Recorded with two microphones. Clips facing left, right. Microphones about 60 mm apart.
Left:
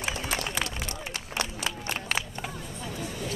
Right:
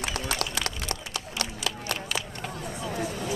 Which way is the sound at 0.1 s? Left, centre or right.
Right.